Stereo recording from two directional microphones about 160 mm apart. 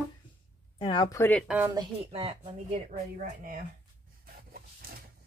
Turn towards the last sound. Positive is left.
turn(degrees=-70)  # may be behind; listen again after turning